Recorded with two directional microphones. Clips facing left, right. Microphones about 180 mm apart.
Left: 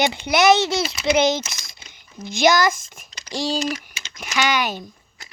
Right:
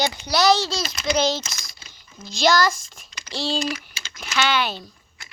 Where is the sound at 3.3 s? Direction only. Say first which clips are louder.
Left 2 dB; 15° left (ahead or behind).